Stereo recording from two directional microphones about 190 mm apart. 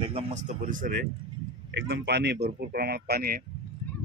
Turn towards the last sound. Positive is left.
turn(degrees=-55)  # may be behind; listen again after turning